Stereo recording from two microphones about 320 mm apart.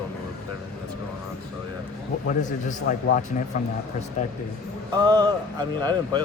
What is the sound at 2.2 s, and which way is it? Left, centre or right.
Speech, left.